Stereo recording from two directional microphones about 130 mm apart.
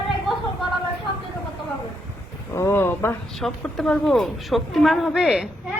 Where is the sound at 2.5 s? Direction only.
20° left (ahead or behind).